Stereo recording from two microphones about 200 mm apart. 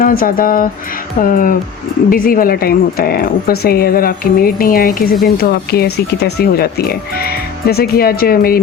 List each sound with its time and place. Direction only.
0.0 s speech: 45° left (ahead or behind)